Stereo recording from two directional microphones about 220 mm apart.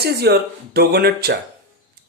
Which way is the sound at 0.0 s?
45° right (ahead or behind).